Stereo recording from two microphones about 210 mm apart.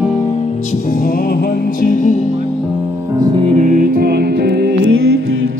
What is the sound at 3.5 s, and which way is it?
Music, 40° right (ahead or behind).